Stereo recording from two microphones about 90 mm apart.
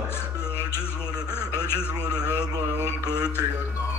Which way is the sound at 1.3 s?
25° left (ahead or behind).